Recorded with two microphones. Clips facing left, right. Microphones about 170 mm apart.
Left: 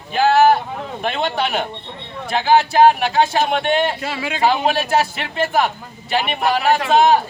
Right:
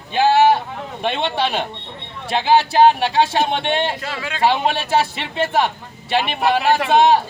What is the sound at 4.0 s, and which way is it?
Speech, 10° left (ahead or behind).